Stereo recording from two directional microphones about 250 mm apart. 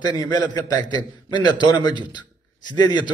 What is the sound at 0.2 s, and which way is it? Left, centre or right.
A man's voice, centre.